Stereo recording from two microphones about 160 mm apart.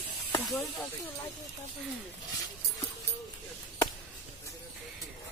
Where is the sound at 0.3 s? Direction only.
15° left (ahead or behind).